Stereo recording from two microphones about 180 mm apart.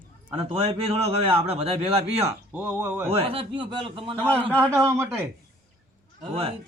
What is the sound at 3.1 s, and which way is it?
A man's voice, 30° right (ahead or behind).